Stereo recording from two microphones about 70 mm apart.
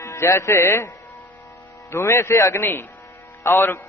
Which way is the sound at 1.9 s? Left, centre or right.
Left.